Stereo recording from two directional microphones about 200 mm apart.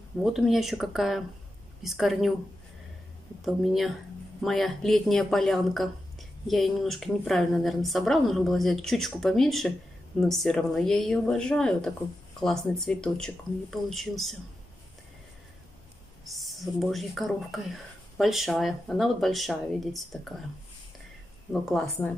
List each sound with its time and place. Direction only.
0.2 s speech: centre (ahead or behind)
3.4 s speech: centre (ahead or behind)
16.3 s speech: centre (ahead or behind)
21.5 s speech: centre (ahead or behind)